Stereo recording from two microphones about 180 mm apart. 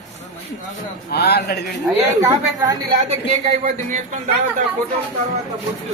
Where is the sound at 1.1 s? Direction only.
65° left (ahead or behind).